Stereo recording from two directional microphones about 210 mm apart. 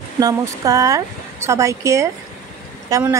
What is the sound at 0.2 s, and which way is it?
Speech, 15° right (ahead or behind).